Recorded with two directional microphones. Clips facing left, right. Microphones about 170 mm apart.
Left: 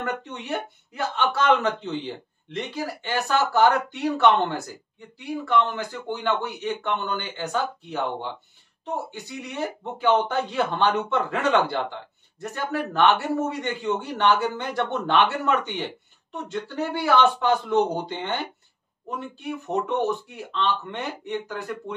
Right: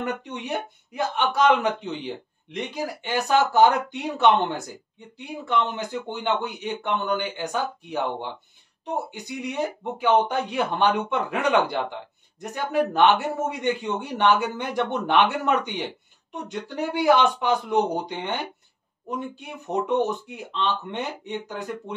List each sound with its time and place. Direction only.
0.2 s speech: 15° right (ahead or behind)